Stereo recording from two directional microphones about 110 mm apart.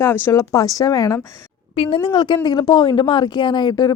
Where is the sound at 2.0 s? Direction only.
45° left (ahead or behind).